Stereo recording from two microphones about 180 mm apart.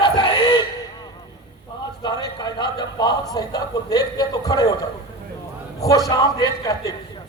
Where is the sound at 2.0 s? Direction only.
20° left (ahead or behind).